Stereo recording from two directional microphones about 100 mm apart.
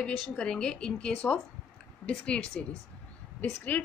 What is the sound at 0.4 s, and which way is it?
A woman's voice, 5° left (ahead or behind).